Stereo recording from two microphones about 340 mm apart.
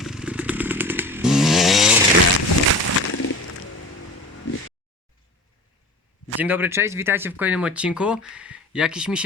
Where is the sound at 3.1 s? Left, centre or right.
Left.